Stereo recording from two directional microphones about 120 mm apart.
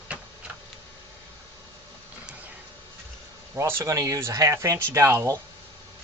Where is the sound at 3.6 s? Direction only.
20° right (ahead or behind).